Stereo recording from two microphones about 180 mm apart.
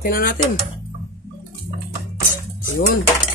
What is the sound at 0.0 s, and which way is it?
Speech, 55° left (ahead or behind).